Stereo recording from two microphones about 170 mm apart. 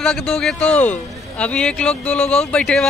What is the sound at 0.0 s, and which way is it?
Speech, 5° left (ahead or behind).